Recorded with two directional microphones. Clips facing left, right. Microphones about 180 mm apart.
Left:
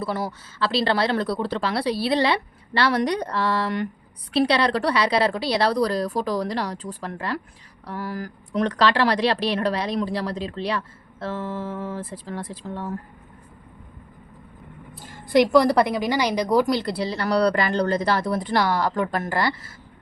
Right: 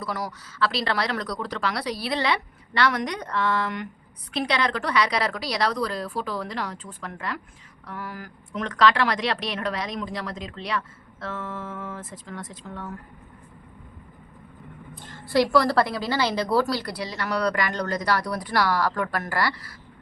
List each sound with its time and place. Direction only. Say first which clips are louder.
0.0 s a woman's voice: left 4 dB; 30° left (ahead or behind)
14.9 s a sound: left 4 dB; 10° left (ahead or behind)
15.5 s a woman's voice: left 4 dB; 20° left (ahead or behind)